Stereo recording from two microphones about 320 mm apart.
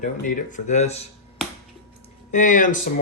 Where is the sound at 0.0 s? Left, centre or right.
Left.